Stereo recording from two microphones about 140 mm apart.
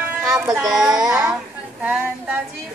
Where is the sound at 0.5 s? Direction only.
5° right (ahead or behind).